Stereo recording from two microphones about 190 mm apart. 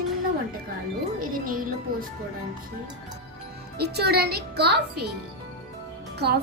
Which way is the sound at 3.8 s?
60° right (ahead or behind).